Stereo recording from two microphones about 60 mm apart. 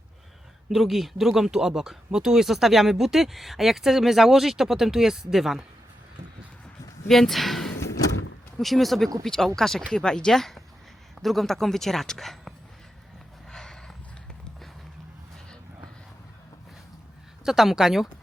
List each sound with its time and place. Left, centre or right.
0.7 s speech: centre
7.1 s speech: centre
7.8 s vehicle: left
8.5 s speech: centre
13.5 s a sound: centre
17.4 s speech: centre